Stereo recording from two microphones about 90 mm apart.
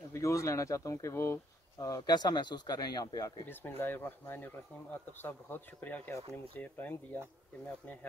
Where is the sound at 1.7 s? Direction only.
50° left (ahead or behind).